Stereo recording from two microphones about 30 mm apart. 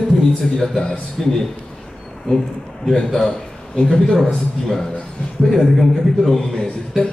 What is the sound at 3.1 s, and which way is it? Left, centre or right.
Speech, centre.